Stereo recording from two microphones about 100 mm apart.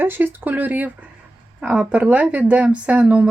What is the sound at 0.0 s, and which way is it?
Speech, 20° right (ahead or behind).